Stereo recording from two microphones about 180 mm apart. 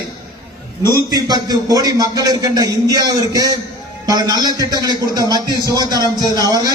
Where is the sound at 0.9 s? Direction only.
20° right (ahead or behind).